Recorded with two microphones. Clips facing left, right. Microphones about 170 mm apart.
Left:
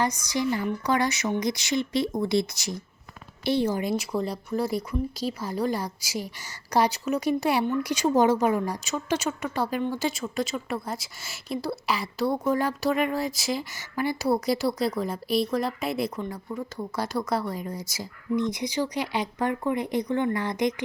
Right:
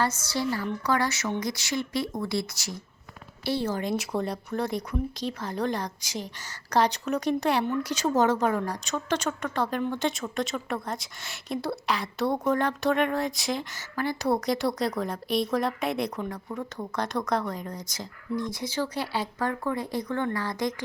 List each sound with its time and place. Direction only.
0.0 s a woman's voice: 15° left (ahead or behind)
3.9 s speech: centre (ahead or behind)
18.3 s a woman's voice: 20° left (ahead or behind)